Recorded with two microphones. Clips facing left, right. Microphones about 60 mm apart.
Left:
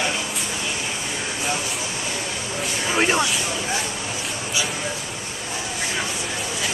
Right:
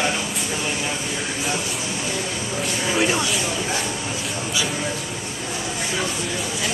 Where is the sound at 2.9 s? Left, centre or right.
Left.